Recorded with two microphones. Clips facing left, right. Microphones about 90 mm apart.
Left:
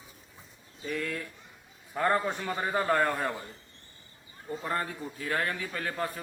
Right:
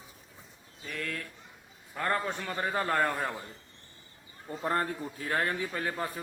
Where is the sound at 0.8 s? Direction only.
5° left (ahead or behind).